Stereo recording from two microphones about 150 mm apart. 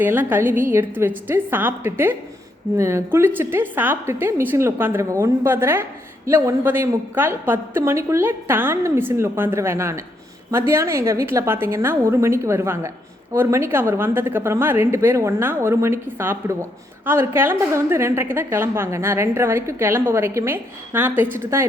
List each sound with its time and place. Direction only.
0.0 s a woman's voice: 15° right (ahead or behind)